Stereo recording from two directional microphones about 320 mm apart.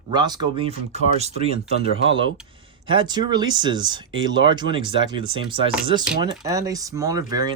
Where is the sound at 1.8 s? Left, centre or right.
Left.